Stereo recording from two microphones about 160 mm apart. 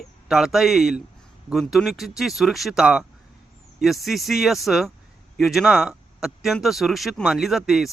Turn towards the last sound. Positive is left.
turn(degrees=0)  # may be behind; listen again after turning